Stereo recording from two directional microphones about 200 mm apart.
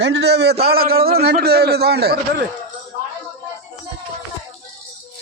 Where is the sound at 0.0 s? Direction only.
55° right (ahead or behind).